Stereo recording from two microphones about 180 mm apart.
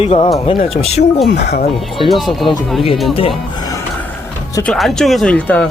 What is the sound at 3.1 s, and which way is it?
Speech, 30° left (ahead or behind).